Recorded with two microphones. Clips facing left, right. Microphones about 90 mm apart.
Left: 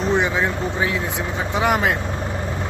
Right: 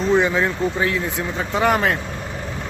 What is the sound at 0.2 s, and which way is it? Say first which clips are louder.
Speech: right 2 dB; 15° left (ahead or behind).